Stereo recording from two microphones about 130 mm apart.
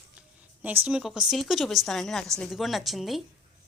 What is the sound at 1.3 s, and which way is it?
A woman's voice, centre (ahead or behind).